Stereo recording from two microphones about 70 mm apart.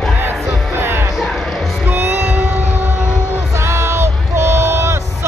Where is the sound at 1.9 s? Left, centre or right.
Right.